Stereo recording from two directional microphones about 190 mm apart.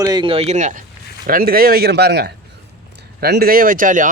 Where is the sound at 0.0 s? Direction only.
25° right (ahead or behind).